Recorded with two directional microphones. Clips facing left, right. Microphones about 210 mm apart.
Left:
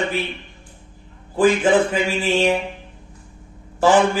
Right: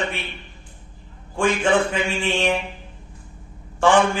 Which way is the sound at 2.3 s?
25° left (ahead or behind).